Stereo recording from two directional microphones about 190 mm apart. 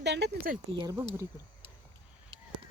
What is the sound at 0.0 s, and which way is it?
Speech, 65° right (ahead or behind).